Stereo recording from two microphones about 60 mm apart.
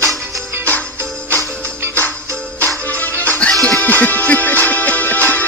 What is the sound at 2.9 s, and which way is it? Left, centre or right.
Music, left.